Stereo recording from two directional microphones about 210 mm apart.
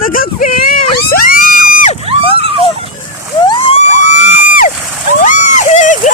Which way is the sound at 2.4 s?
25° right (ahead or behind).